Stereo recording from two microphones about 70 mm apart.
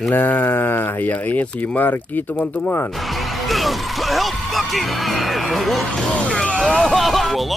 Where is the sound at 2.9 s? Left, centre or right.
Centre.